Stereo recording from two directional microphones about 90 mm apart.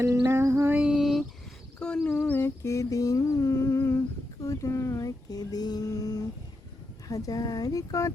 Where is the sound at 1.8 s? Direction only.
10° left (ahead or behind).